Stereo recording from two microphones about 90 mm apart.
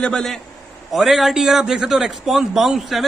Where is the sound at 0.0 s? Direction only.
5° left (ahead or behind).